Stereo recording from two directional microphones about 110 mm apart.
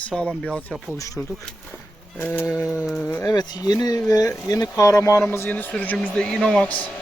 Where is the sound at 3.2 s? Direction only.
35° left (ahead or behind); by 6.7 s 5° left (ahead or behind).